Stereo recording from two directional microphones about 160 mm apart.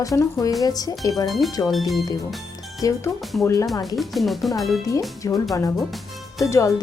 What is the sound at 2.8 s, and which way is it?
Speech, 25° left (ahead or behind).